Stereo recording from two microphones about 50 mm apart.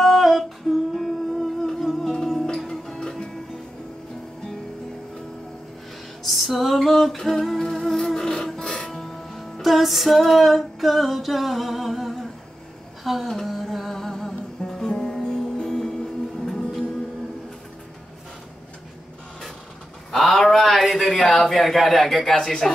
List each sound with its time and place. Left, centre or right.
0.0 s music: centre
6.2 s music: centre
13.0 s a sound: centre
13.6 s music: centre
20.2 s a sound: centre
21.3 s speech: centre